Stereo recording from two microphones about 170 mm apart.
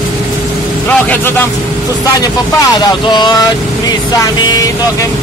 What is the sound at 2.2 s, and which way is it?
Speech, 20° left (ahead or behind).